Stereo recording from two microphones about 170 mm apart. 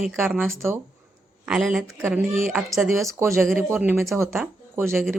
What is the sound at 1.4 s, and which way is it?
Speech, centre (ahead or behind).